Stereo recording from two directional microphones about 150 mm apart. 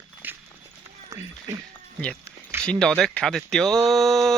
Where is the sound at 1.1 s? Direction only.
20° right (ahead or behind).